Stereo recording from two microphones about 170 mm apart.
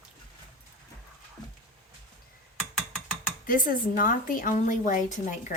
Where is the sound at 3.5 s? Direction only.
55° left (ahead or behind).